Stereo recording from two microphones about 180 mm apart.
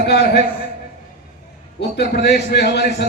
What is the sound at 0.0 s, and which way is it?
Speech, 65° left (ahead or behind).